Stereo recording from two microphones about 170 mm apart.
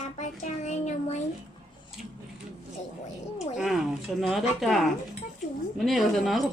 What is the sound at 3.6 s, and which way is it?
Speech, centre (ahead or behind).